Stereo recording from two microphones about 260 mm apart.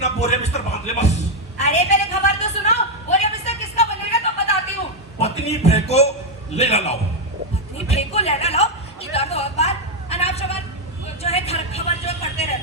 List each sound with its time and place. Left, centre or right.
0.0 s music: left
1.5 s a sound: left
11.2 s vehicle: left